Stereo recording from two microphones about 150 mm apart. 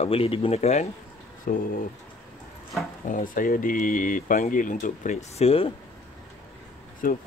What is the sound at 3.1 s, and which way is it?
Speech, 65° left (ahead or behind).